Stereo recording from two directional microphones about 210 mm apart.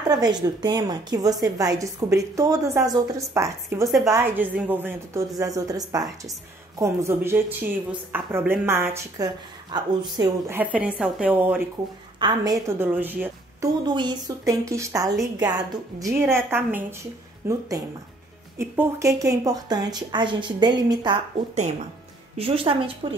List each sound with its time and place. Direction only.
0.1 s a woman's voice: 20° right (ahead or behind)
10.6 s a woman's voice: 5° right (ahead or behind)
12.2 s a woman's voice: 20° right (ahead or behind)
13.8 s a woman's voice: 20° right (ahead or behind)
22.4 s speech: 25° right (ahead or behind)